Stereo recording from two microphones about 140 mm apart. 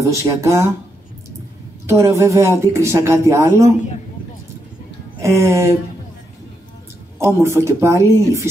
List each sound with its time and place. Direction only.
0.0 s speech: 20° right (ahead or behind)
1.9 s speech: 20° right (ahead or behind)
5.2 s speech: 20° right (ahead or behind)
7.4 s speech: 20° right (ahead or behind)